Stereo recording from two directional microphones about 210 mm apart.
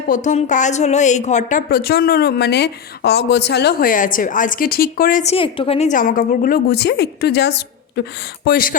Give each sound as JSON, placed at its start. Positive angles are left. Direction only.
{"t": 0.1, "sound": "a woman's voice", "side_deg": 35}